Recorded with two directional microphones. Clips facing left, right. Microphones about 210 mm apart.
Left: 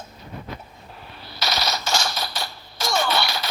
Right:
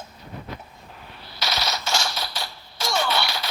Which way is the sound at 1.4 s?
40° left (ahead or behind).